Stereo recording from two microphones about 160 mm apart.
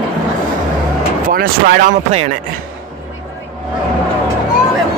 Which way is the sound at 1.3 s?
60° right (ahead or behind).